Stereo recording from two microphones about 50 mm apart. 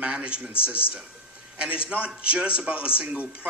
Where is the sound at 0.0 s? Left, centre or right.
Right.